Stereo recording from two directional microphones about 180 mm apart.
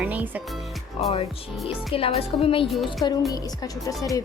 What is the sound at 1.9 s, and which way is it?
Speech, 30° left (ahead or behind).